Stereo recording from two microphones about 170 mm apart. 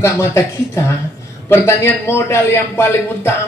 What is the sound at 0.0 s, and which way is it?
A man's voice, 15° left (ahead or behind).